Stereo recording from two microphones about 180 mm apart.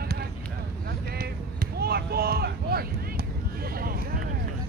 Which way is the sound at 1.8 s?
60° right (ahead or behind).